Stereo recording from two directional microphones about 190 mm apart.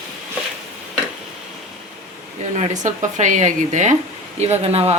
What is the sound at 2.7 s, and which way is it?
Speech, 40° right (ahead or behind).